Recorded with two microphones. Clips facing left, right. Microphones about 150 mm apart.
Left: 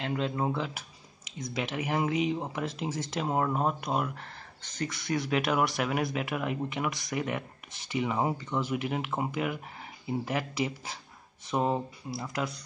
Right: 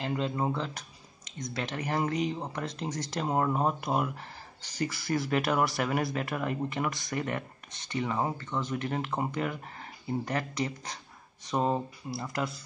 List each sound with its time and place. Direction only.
0.0 s speech: centre (ahead or behind)